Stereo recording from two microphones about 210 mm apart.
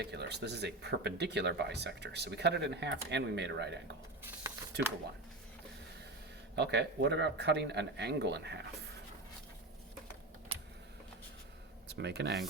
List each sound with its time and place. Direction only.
0.0 s speech: 50° right (ahead or behind)
4.2 s a sound: 10° right (ahead or behind)
6.6 s speech: 55° right (ahead or behind)
11.9 s speech: 55° right (ahead or behind)